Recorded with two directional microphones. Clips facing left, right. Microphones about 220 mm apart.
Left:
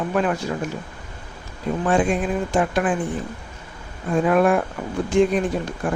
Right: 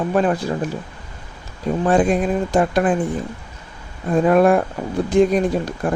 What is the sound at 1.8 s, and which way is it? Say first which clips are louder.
Speech: right 4 dB; 40° right (ahead or behind).